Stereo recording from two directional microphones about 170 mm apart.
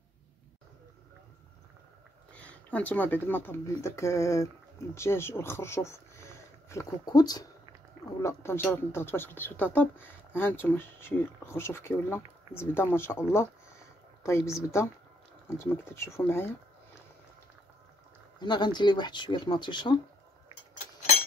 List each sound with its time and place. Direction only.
2.3 s speech: 10° left (ahead or behind)
14.2 s speech: 15° left (ahead or behind)
18.4 s speech: 25° left (ahead or behind)